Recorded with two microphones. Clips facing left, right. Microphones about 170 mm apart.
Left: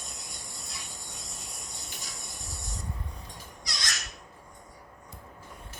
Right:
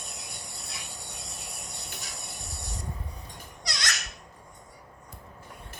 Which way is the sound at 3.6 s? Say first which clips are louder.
Right 4 dB; 70° right (ahead or behind).